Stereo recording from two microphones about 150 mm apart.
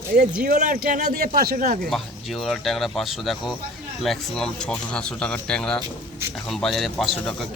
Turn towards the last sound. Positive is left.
turn(degrees=0)  # may be behind; listen again after turning